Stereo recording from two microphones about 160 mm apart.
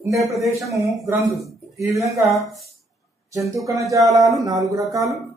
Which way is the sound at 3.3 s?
20° right (ahead or behind).